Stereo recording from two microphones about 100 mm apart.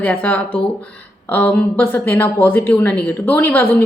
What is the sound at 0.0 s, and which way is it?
Speech, 15° left (ahead or behind).